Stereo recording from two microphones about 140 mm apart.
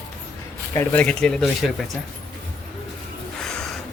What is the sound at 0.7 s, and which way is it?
Speech, 15° left (ahead or behind).